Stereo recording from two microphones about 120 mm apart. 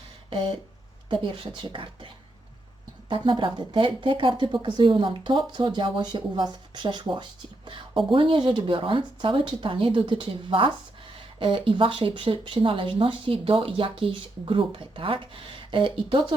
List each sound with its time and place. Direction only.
0.3 s speech: 45° right (ahead or behind)
3.1 s speech: 45° right (ahead or behind)